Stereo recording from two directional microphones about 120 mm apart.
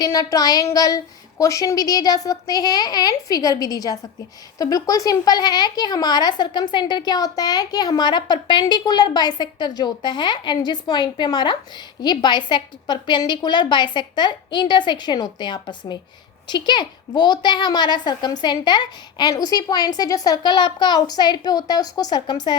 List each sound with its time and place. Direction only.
0.0 s a woman's voice: 30° left (ahead or behind)